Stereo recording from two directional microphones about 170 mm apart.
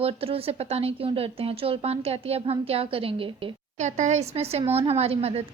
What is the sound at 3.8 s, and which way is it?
Speech, 45° right (ahead or behind).